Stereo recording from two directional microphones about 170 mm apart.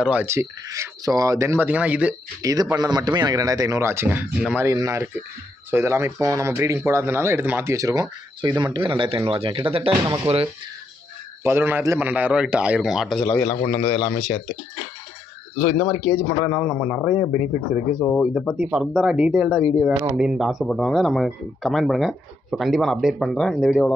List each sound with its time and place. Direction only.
0.0 s speech: 10° right (ahead or behind)
2.4 s speech: 20° right (ahead or behind)
11.4 s speech: 15° right (ahead or behind)
13.7 s speech: 25° left (ahead or behind)
15.8 s speech: 5° left (ahead or behind)
16.4 s speech: 5° right (ahead or behind)